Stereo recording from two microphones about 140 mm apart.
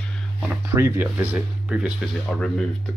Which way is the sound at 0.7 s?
15° right (ahead or behind).